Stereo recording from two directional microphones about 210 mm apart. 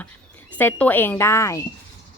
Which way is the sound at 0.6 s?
10° left (ahead or behind).